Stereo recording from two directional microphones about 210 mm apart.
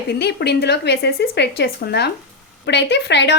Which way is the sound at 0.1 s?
55° left (ahead or behind).